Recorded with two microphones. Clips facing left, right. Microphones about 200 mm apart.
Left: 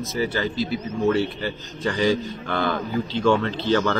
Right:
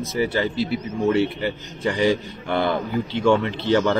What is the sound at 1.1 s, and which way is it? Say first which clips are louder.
A man's voice: right 2 dB; 20° right (ahead or behind).